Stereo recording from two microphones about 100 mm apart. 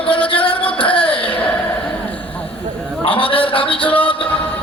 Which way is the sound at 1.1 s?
60° left (ahead or behind).